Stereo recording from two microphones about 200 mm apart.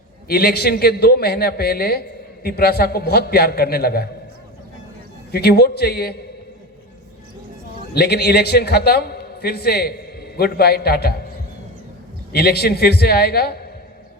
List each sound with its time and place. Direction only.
0.3 s a man's voice: 50° left (ahead or behind)
5.3 s a man's voice: 55° left (ahead or behind)
7.9 s a man's voice: 55° left (ahead or behind)
12.3 s a man's voice: 50° left (ahead or behind)